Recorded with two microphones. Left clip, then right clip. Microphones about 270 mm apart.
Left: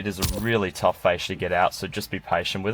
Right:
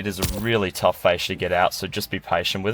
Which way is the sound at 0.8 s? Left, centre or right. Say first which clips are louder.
Right 2 dB; right.